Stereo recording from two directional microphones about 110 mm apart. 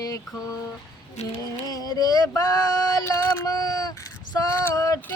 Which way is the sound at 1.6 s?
35° left (ahead or behind).